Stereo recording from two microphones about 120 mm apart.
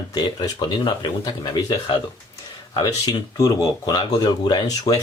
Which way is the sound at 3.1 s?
30° left (ahead or behind).